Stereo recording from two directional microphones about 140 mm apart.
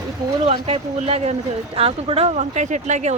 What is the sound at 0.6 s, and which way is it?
Speech, 45° right (ahead or behind).